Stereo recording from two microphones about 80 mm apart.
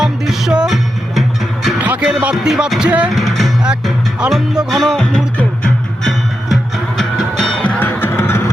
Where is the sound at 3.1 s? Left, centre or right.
Centre.